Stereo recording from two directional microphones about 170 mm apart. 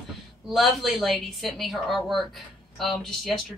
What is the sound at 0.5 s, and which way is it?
Speech, centre (ahead or behind).